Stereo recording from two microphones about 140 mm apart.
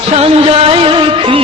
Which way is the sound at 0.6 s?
40° right (ahead or behind).